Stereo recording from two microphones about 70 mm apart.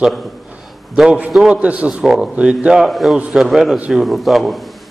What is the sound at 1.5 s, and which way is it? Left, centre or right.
Speech, centre.